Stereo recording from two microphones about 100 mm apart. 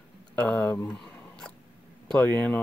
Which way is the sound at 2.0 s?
10° left (ahead or behind).